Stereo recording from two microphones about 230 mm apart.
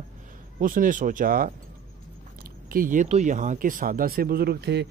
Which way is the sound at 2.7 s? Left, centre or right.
Right.